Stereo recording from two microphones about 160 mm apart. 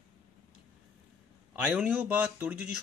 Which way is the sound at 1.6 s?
10° right (ahead or behind).